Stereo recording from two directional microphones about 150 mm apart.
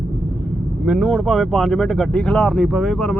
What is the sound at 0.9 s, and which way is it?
Speech, centre (ahead or behind).